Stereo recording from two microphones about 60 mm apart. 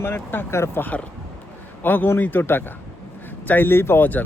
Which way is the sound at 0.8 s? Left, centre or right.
Left.